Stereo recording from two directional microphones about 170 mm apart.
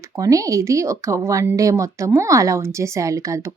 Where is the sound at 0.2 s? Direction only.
20° right (ahead or behind).